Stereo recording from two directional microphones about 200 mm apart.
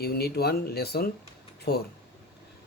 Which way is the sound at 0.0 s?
50° left (ahead or behind).